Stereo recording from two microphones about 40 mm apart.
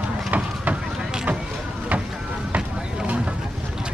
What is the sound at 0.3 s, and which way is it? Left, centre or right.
Run, right.